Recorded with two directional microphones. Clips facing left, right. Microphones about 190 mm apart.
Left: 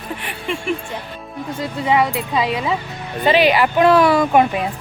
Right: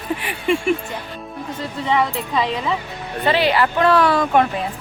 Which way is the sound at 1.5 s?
10° left (ahead or behind).